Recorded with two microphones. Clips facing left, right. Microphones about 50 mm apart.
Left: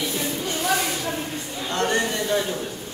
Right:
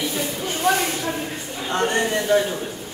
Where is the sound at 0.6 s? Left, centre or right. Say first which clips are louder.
Right 4 dB; right.